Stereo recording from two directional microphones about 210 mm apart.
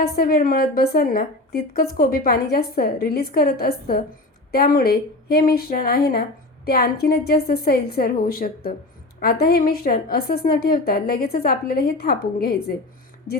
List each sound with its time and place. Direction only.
0.0 s a woman's voice: 45° left (ahead or behind)